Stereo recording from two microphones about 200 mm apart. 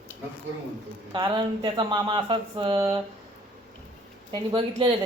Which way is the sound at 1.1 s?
20° right (ahead or behind).